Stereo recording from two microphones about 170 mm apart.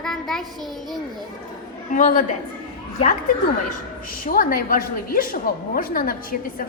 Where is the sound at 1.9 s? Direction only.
50° left (ahead or behind).